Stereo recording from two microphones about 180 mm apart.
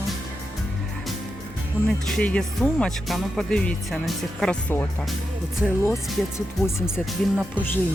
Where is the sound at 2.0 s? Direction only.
5° left (ahead or behind).